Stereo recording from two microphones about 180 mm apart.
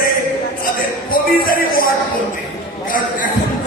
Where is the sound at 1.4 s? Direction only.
50° left (ahead or behind).